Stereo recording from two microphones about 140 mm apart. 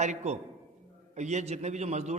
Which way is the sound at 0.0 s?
55° right (ahead or behind).